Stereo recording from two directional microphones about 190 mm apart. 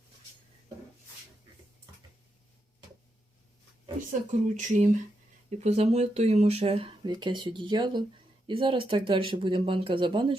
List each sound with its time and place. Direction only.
4.3 s speech: 40° right (ahead or behind)